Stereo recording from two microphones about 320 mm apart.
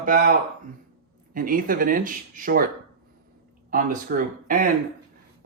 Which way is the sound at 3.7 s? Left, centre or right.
Right.